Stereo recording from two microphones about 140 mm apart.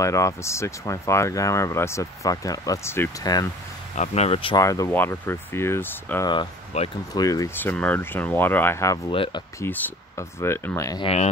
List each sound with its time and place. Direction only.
0.0 s speech: 20° left (ahead or behind)
3.9 s speech: 55° left (ahead or behind)
4.6 s speech: 25° left (ahead or behind)
6.7 s speech: 50° left (ahead or behind)
7.2 s speech: 25° left (ahead or behind)
9.1 s speech: 40° left (ahead or behind)
9.6 s speech: 15° left (ahead or behind)